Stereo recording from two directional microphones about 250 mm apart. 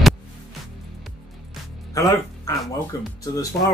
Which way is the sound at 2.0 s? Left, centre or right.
Centre.